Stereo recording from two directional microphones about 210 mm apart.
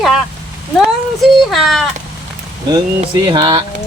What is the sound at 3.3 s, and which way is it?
Speech, 20° right (ahead or behind).